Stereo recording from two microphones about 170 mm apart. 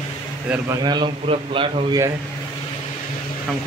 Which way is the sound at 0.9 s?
30° right (ahead or behind).